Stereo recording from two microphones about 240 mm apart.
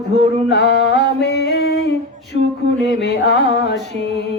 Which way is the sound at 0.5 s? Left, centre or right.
Left.